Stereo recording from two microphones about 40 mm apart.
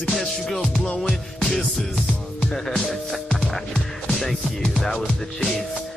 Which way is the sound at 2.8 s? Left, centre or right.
Left.